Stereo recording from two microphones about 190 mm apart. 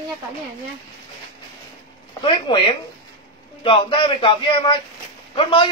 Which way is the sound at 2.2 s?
25° left (ahead or behind).